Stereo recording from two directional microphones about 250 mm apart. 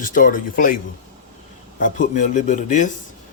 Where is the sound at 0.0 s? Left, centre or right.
Left.